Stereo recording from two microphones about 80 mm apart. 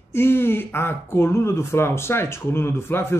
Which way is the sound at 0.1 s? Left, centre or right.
Left.